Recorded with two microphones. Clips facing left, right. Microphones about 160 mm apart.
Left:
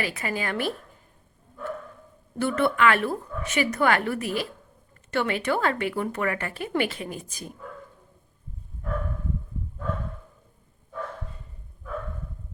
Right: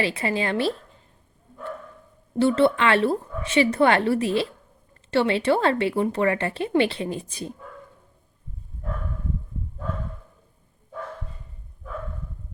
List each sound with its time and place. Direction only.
0.0 s speech: 25° right (ahead or behind)
2.4 s speech: 25° right (ahead or behind)